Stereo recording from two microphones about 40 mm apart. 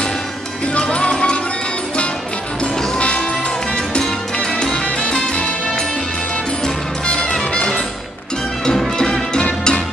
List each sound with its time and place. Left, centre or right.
0.7 s music: left
2.6 s music: left
6.6 s music: left
8.9 s music: centre